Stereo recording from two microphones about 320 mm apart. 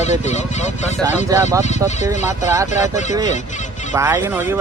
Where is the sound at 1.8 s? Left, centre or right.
Centre.